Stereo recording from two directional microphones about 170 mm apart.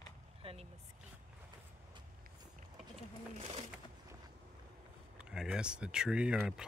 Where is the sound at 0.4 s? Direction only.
35° right (ahead or behind).